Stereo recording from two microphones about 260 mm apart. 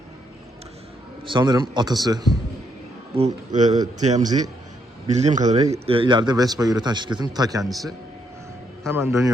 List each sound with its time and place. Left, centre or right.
1.2 s a man's voice: centre
3.2 s a man's voice: right
7.6 s a man's voice: centre
8.9 s a man's voice: centre